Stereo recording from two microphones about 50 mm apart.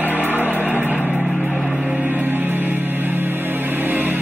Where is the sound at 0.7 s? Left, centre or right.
Right.